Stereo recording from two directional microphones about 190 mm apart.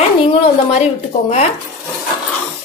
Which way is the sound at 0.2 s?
30° left (ahead or behind).